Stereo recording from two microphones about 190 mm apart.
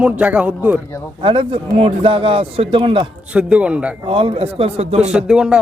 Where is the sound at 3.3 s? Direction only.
5° right (ahead or behind).